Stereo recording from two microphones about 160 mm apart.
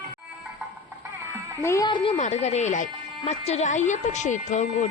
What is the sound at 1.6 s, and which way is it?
Speech, 20° left (ahead or behind).